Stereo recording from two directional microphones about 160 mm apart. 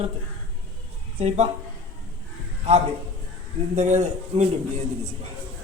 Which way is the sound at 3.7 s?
45° right (ahead or behind).